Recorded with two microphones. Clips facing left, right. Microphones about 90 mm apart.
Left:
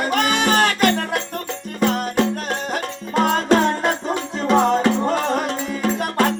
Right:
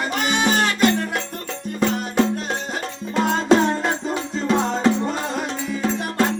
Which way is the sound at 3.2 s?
55° left (ahead or behind).